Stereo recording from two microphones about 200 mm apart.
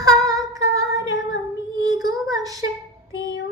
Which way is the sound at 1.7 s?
20° right (ahead or behind).